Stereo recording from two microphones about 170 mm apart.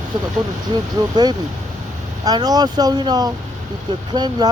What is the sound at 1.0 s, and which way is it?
Speech, 25° right (ahead or behind).